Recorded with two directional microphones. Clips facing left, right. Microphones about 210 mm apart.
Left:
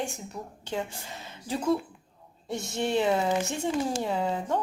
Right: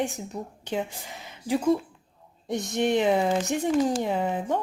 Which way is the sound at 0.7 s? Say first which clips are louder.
Right 2 dB; 15° right (ahead or behind).